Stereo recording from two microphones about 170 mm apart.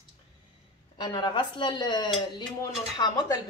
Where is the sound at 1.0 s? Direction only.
25° left (ahead or behind).